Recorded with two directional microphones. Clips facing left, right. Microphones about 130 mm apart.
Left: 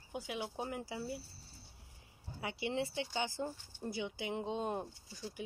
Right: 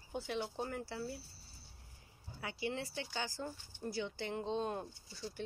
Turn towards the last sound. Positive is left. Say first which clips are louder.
# left 2 dB
turn(degrees=15)  # may be behind; listen again after turning